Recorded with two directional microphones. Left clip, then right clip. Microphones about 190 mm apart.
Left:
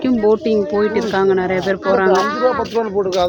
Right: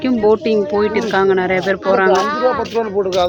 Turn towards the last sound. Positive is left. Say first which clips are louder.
# right 1 dB
turn(degrees=40)  # may be behind; listen again after turning